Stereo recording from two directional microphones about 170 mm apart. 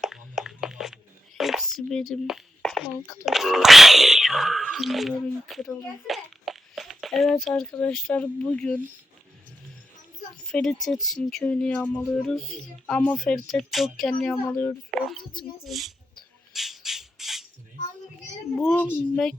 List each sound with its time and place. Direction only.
0.0 s a sound: centre (ahead or behind)
3.2 s speech: centre (ahead or behind)
10.4 s speech: 5° left (ahead or behind)
15.2 s speech: 25° left (ahead or behind)
15.6 s speech: centre (ahead or behind)
16.5 s squawk: centre (ahead or behind)
18.6 s speech: 10° left (ahead or behind)